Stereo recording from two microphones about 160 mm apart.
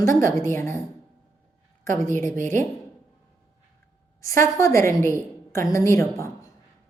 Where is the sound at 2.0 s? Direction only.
15° left (ahead or behind).